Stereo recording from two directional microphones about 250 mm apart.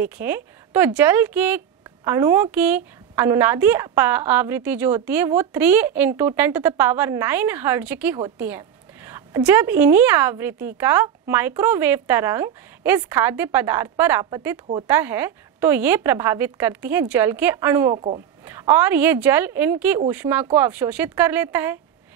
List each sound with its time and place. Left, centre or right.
0.0 s a woman's voice: centre
17.9 s a woman's voice: right
18.4 s a woman's voice: centre